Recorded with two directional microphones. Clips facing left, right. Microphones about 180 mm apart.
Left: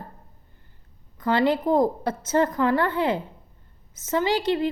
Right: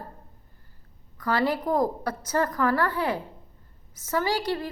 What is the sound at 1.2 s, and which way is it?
A woman's voice, 25° left (ahead or behind).